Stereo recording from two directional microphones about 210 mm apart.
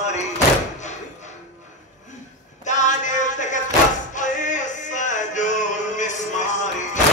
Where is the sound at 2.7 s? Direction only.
35° left (ahead or behind).